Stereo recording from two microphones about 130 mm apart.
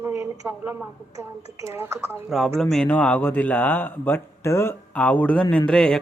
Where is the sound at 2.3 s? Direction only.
5° right (ahead or behind).